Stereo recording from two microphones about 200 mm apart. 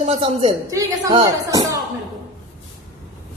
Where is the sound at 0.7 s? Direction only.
15° right (ahead or behind).